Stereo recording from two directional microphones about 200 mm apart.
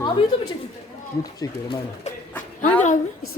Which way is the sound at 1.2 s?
20° left (ahead or behind).